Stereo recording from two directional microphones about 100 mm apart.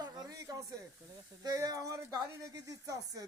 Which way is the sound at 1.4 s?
35° right (ahead or behind).